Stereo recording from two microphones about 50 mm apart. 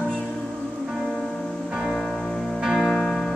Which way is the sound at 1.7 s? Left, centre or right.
Centre.